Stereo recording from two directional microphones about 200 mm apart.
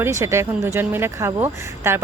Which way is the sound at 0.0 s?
15° right (ahead or behind).